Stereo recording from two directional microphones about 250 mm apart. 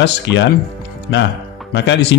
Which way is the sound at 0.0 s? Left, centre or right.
Left.